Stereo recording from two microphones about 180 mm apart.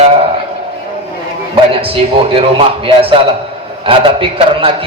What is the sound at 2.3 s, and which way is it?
A man's voice, 30° right (ahead or behind).